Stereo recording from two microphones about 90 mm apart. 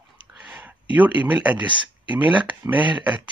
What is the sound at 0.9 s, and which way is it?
Speech, 20° right (ahead or behind).